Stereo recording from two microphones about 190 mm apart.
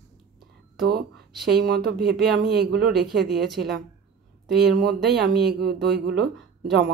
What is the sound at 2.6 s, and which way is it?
Speech, 55° right (ahead or behind).